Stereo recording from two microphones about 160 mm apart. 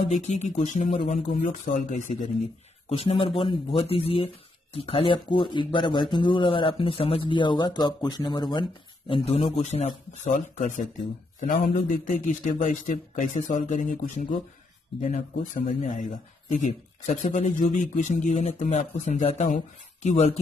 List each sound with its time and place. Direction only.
0.1 s a man's voice: 45° left (ahead or behind)
1.3 s a man's voice: 55° left (ahead or behind)
2.9 s a man's voice: 40° left (ahead or behind)